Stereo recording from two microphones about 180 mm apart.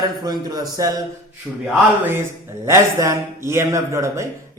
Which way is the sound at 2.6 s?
15° right (ahead or behind).